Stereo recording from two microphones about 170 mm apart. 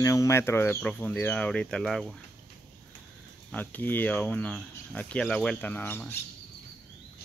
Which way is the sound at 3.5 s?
10° left (ahead or behind).